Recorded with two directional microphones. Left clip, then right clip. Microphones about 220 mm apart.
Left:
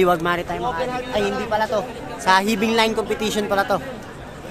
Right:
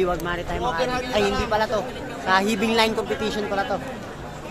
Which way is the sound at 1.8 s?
40° left (ahead or behind).